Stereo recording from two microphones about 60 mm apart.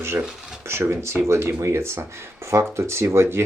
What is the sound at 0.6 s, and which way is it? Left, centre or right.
Speech, right.